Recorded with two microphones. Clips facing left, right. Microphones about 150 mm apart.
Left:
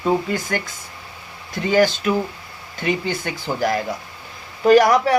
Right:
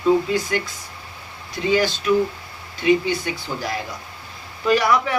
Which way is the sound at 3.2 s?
50° left (ahead or behind).